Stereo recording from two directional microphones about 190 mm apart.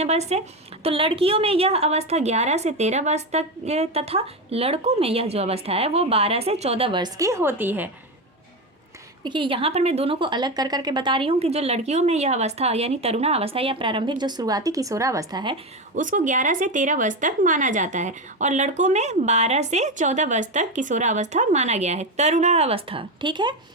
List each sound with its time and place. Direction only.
0.0 s speech: 35° right (ahead or behind); by 7.9 s 10° right (ahead or behind)
9.2 s a woman's voice: 25° right (ahead or behind)
16.0 s speech: 45° right (ahead or behind); by 23.6 s 25° right (ahead or behind)